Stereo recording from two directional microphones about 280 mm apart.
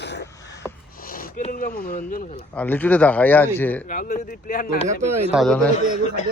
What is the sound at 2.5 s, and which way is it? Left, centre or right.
Speech, centre.